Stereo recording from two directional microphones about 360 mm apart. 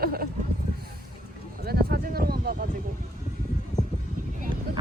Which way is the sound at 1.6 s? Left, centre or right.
Right.